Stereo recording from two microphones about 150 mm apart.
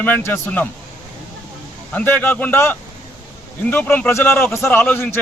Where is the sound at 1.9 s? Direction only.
10° left (ahead or behind).